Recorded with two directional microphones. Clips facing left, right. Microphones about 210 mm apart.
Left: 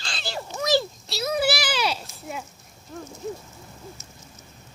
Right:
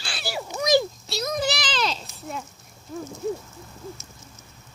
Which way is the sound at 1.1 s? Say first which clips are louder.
Left 4 dB; 5° left (ahead or behind).